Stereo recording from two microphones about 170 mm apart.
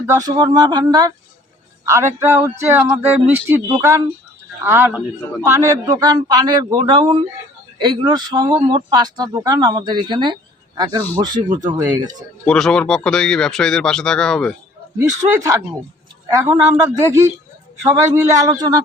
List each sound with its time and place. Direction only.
0.1 s speech: 20° right (ahead or behind)
12.5 s speech: 5° left (ahead or behind)
14.9 s speech: 20° right (ahead or behind)
17.0 s speech: 15° right (ahead or behind)